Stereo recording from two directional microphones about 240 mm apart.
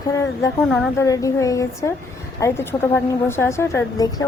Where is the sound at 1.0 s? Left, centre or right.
Centre.